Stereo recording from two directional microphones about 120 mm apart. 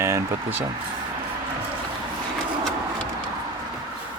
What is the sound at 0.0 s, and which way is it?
Speech, 25° right (ahead or behind).